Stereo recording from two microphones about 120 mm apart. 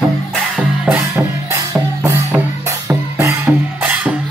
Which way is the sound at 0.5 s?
15° right (ahead or behind).